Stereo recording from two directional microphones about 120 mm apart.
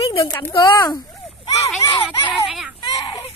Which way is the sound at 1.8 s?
25° left (ahead or behind).